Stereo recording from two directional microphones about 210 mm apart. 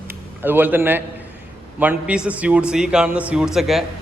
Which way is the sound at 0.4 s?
10° right (ahead or behind).